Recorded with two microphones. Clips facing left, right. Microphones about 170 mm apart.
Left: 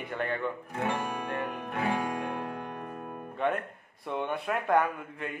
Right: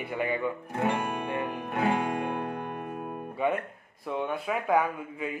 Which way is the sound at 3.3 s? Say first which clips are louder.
Right 1 dB; 5° right (ahead or behind).